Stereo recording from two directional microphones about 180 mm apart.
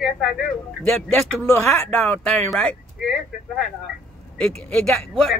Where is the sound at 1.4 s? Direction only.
15° left (ahead or behind).